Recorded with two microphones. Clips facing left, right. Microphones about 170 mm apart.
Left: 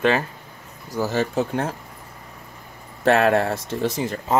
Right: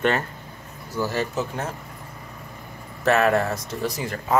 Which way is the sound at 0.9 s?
30° left (ahead or behind).